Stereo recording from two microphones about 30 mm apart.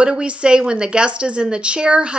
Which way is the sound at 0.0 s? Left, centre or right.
Right.